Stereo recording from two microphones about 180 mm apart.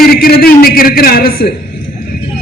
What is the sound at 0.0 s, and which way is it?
A man's voice, 55° left (ahead or behind).